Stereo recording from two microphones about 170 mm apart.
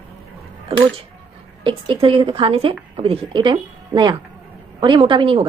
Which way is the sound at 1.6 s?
30° right (ahead or behind).